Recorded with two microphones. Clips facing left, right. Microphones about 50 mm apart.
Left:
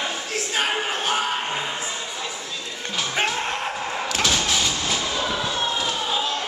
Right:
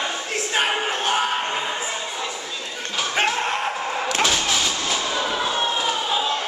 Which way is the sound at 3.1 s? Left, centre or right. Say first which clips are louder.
Right 3 dB; centre.